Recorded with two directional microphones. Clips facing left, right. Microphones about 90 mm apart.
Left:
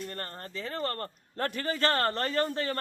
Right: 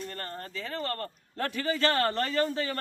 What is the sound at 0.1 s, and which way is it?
Speech, 35° left (ahead or behind).